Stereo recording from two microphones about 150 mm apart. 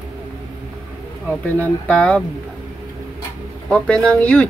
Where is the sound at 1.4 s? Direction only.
10° left (ahead or behind).